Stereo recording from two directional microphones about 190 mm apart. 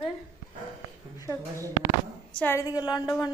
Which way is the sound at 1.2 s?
15° left (ahead or behind).